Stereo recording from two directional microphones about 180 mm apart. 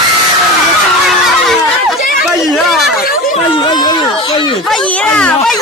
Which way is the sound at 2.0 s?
50° left (ahead or behind).